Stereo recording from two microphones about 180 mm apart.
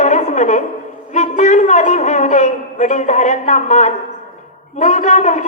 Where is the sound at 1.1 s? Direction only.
40° left (ahead or behind).